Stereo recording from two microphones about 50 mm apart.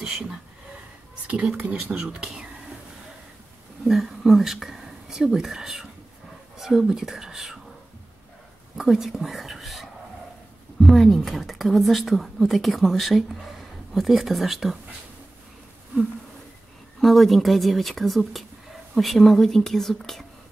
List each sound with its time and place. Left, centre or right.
0.0 s speech: centre
1.2 s a sound: right
1.7 s speech: right
3.8 s speech: centre
8.7 s a woman's voice: centre
17.0 s a woman's voice: centre